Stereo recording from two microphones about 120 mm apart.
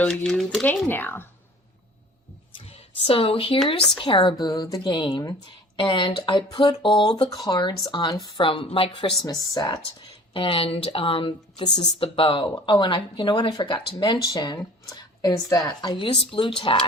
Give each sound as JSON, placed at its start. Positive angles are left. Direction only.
{"t": 0.0, "sound": "speech", "side_deg": 15}
{"t": 0.3, "sound": "speech", "side_deg": 0}
{"t": 0.7, "sound": "speech", "side_deg": 15}
{"t": 2.6, "sound": "a sound", "side_deg": 55}
{"t": 4.0, "sound": "speech", "side_deg": 45}
{"t": 4.4, "sound": "speech", "side_deg": 35}
{"t": 5.7, "sound": "speech", "side_deg": 45}
{"t": 10.3, "sound": "speech", "side_deg": 50}